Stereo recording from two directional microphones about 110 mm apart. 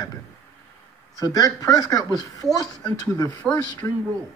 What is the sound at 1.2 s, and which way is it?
Speech, 35° left (ahead or behind).